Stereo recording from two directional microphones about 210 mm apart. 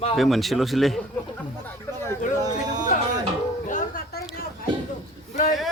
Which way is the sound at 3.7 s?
40° left (ahead or behind).